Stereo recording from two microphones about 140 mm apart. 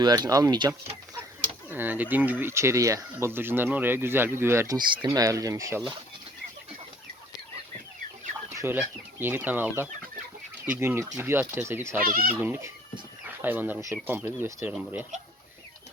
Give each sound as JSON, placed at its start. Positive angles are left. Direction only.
{"t": 0.0, "sound": "speech", "side_deg": -30}
{"t": 1.7, "sound": "speech", "side_deg": -15}
{"t": 8.4, "sound": "speech", "side_deg": -15}
{"t": 11.9, "sound": "speech", "side_deg": -90}
{"t": 12.4, "sound": "speech", "side_deg": -15}